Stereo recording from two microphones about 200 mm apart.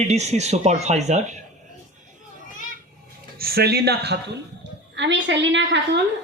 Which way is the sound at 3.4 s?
50° right (ahead or behind).